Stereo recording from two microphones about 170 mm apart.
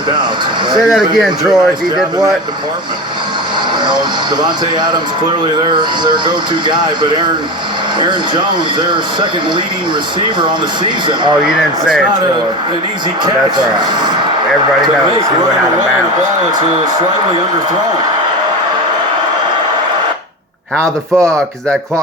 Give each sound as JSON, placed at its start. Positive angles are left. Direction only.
{"t": 0.9, "sound": "speech", "side_deg": 0}
{"t": 4.4, "sound": "speech", "side_deg": -25}
{"t": 10.4, "sound": "speech", "side_deg": -25}
{"t": 11.4, "sound": "speech", "side_deg": 0}
{"t": 20.8, "sound": "speech", "side_deg": -20}